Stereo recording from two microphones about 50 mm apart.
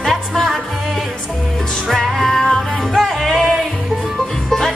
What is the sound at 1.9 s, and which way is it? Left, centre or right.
Music, centre.